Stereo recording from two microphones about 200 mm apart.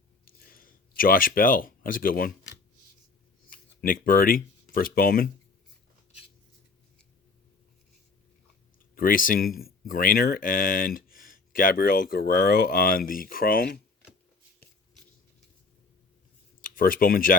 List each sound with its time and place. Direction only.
0.3 s a sound: 45° left (ahead or behind)
3.5 s speech: 45° left (ahead or behind)
9.0 s speech: 45° left (ahead or behind)
16.6 s speech: 45° left (ahead or behind)